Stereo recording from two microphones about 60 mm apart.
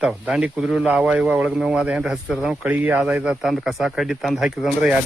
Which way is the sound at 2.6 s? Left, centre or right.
Right.